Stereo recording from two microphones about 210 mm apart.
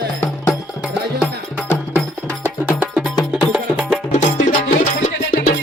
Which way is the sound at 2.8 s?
5° right (ahead or behind).